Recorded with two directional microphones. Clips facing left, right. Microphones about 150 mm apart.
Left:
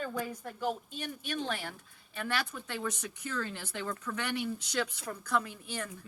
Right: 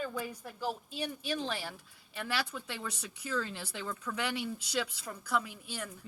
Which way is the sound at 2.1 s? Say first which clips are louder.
Left 1 dB; 10° right (ahead or behind).